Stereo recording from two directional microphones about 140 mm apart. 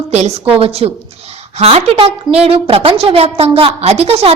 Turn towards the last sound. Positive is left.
turn(degrees=-45)  # may be behind; listen again after turning